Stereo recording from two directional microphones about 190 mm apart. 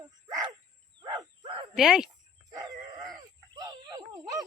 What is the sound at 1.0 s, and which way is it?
Wild animals, 20° right (ahead or behind).